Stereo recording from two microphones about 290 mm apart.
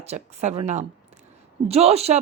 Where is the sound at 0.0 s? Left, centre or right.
Right.